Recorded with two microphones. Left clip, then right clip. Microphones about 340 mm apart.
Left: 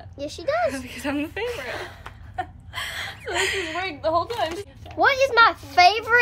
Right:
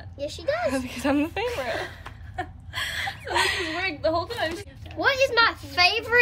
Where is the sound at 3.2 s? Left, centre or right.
Centre.